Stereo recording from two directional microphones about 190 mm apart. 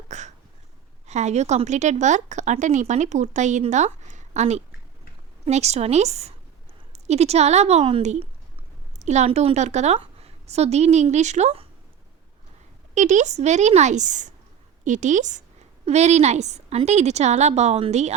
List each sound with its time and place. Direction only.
0.1 s a sound: 40° right (ahead or behind)
1.0 s a woman's voice: 35° right (ahead or behind)
12.9 s a woman's voice: 40° right (ahead or behind)